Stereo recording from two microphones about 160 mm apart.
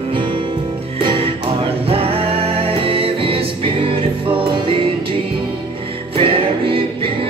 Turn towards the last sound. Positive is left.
turn(degrees=-35)  # may be behind; listen again after turning